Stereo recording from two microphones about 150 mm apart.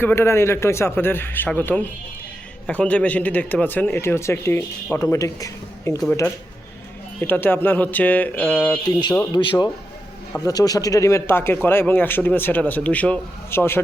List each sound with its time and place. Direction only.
0.0 s speech: 15° left (ahead or behind)
7.2 s speech: 15° left (ahead or behind)
9.3 s a man's voice: 30° left (ahead or behind); by 13.8 s 15° left (ahead or behind)